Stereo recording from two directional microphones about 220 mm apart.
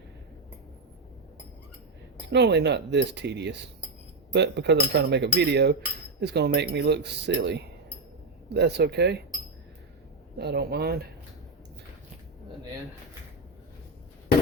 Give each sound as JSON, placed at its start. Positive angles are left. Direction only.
{"t": 2.3, "sound": "speech", "side_deg": -50}
{"t": 10.3, "sound": "speech", "side_deg": -45}